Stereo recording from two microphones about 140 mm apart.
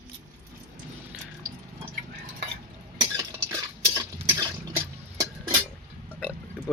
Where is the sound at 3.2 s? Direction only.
25° right (ahead or behind).